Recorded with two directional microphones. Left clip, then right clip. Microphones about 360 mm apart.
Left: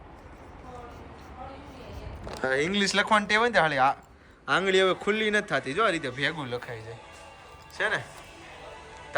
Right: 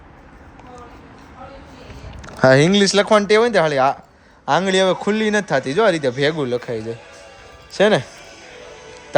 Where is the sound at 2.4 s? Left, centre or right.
Centre.